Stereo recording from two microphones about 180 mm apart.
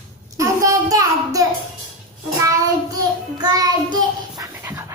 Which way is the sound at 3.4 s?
20° right (ahead or behind).